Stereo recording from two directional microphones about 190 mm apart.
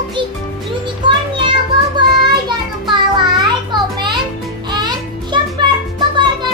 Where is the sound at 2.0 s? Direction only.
25° right (ahead or behind).